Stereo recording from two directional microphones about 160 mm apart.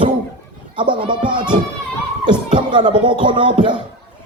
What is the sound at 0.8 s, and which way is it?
Speech, 30° right (ahead or behind).